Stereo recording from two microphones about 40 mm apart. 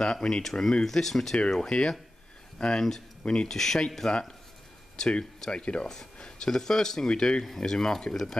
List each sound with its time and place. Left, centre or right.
0.0 s speech: centre
6.5 s speech: centre
7.4 s speech: centre